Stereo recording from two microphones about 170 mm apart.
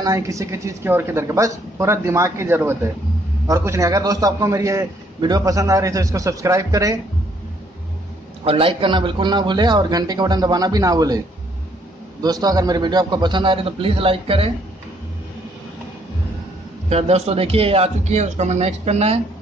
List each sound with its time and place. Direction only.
0.0 s a woman's voice: 20° right (ahead or behind)
8.5 s a man's voice: 30° right (ahead or behind)
12.2 s a man's voice: 25° right (ahead or behind)
16.9 s speech: 40° right (ahead or behind)